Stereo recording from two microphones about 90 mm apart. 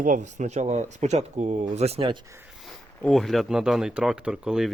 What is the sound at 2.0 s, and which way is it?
Speech, 65° right (ahead or behind).